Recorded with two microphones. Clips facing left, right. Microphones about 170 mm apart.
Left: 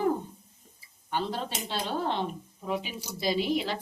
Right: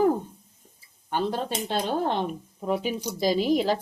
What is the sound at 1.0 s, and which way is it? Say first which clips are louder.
Speech: right 5 dB; 50° right (ahead or behind).